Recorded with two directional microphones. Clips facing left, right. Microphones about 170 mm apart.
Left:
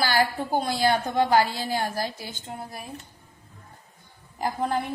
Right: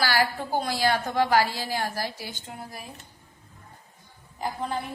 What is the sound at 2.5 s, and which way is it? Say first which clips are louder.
Speech: left 6 dB; 30° left (ahead or behind).